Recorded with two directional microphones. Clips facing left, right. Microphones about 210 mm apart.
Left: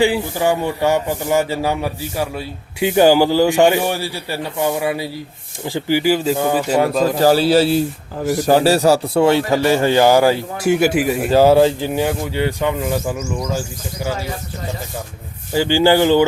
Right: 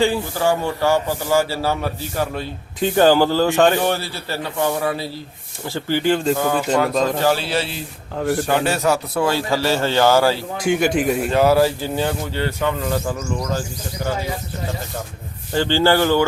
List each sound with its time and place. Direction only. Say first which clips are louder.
0.0 s a man's voice: left 2 dB; 15° left (ahead or behind)
7.2 s a man's voice: left 7 dB; 40° left (ahead or behind); by 11.3 s 5° left (ahead or behind)
11.3 s a man's voice: left 6 dB; 30° left (ahead or behind); by 14.2 s 10° left (ahead or behind)
15.5 s a man's voice: left 3 dB; 10° left (ahead or behind)